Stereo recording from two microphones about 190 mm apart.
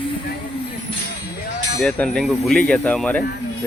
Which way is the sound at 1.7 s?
5° left (ahead or behind).